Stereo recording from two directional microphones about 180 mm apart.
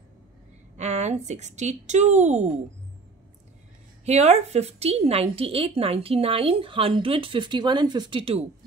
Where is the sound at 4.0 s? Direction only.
35° right (ahead or behind).